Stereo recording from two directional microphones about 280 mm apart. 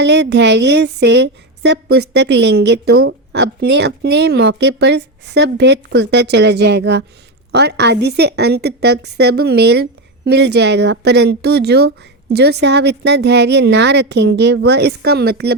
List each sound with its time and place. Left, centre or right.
0.0 s a woman's voice: right